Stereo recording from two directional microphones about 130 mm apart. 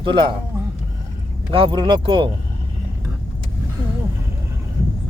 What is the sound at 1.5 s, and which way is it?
Speech, 40° right (ahead or behind).